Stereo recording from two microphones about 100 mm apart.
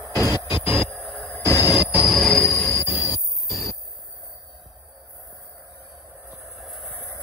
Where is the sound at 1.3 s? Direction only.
25° left (ahead or behind).